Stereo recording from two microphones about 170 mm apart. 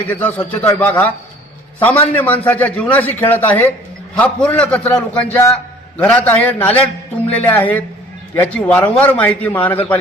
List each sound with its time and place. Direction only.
0.1 s a man's voice: 10° left (ahead or behind)